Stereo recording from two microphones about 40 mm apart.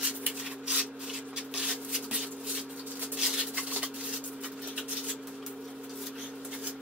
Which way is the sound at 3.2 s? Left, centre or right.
Centre.